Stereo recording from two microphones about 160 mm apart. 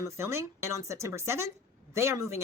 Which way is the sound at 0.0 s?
15° right (ahead or behind).